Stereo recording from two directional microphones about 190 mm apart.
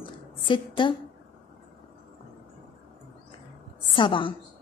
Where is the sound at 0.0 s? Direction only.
25° left (ahead or behind).